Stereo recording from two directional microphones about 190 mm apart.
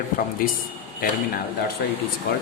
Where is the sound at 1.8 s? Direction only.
55° left (ahead or behind).